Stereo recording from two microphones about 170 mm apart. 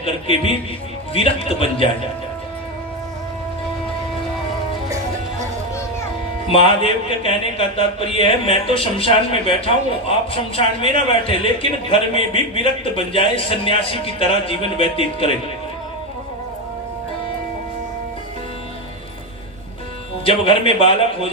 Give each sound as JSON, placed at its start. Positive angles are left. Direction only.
{"t": 0.0, "sound": "speech", "side_deg": 35}
{"t": 6.7, "sound": "speech", "side_deg": 35}
{"t": 20.2, "sound": "speech", "side_deg": 30}